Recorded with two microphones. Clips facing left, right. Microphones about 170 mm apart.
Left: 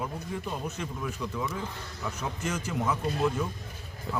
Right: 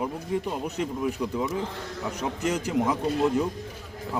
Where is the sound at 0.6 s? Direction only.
15° right (ahead or behind).